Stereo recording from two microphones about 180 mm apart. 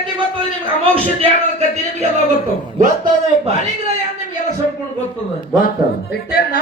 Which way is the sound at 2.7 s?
45° right (ahead or behind).